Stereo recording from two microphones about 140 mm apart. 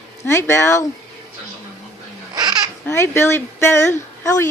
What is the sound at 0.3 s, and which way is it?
Speech, 20° left (ahead or behind).